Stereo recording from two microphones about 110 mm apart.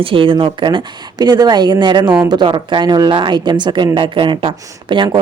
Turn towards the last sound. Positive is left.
turn(degrees=-50)  # may be behind; listen again after turning